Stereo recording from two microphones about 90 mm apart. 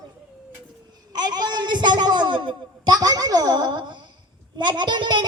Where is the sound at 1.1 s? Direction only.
50° right (ahead or behind).